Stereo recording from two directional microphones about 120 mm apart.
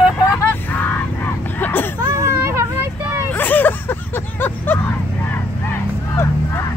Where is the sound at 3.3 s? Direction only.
15° left (ahead or behind).